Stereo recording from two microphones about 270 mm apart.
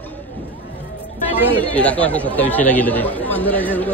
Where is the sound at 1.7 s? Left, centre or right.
Centre.